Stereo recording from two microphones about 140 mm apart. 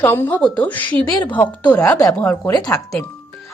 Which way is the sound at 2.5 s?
25° left (ahead or behind).